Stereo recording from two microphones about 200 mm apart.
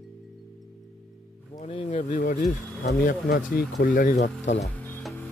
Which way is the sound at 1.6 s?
30° left (ahead or behind).